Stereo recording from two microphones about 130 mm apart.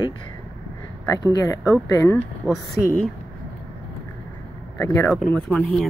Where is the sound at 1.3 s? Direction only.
25° left (ahead or behind).